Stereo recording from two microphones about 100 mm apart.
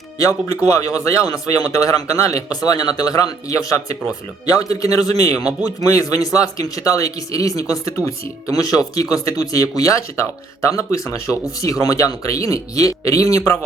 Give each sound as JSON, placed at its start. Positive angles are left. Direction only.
{"t": 0.2, "sound": "speech", "side_deg": 35}